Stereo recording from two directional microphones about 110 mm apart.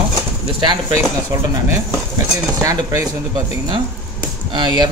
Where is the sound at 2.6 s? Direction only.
30° right (ahead or behind).